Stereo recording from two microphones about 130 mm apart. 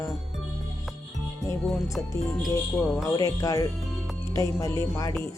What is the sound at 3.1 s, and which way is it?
Speech, 25° left (ahead or behind).